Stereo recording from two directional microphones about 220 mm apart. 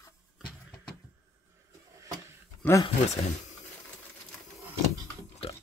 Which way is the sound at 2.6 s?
15° left (ahead or behind).